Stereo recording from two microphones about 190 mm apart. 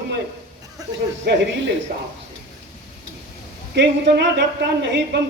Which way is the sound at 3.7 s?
65° right (ahead or behind).